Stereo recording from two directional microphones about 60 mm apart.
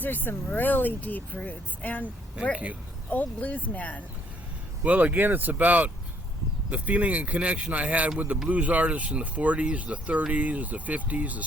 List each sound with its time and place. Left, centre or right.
0.0 s speech: left
2.3 s speech: centre
3.1 s speech: left
4.8 s speech: right